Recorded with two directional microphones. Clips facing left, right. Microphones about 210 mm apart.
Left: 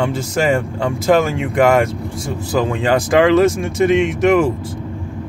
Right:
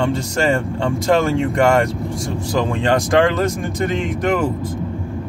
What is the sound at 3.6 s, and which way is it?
Speech, 90° left.